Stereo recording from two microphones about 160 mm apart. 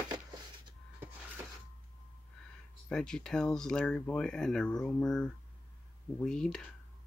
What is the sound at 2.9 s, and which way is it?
Speech, 5° left (ahead or behind).